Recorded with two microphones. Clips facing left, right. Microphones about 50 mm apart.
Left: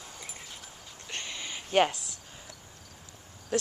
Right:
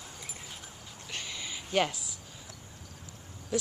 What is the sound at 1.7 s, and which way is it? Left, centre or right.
Speech, left.